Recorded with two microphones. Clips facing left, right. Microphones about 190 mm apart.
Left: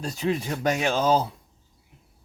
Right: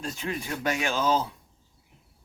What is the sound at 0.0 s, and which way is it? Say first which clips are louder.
Speech: left 6 dB; 35° left (ahead or behind).